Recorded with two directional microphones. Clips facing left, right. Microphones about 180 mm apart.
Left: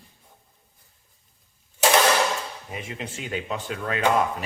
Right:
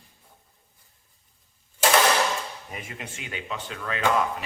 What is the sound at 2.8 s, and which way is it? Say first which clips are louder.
Speech: left 5 dB; 35° left (ahead or behind).